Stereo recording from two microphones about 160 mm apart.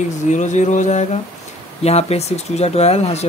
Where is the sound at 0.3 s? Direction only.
50° left (ahead or behind).